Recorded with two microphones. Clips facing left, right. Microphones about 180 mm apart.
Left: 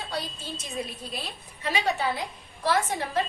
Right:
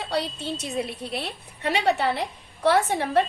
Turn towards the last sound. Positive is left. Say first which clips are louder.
# right 5 dB
turn(degrees=-65)  # may be behind; listen again after turning